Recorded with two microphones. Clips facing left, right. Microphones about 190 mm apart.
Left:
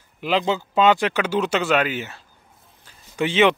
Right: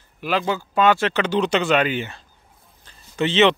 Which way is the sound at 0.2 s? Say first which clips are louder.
Left 1 dB; 20° left (ahead or behind).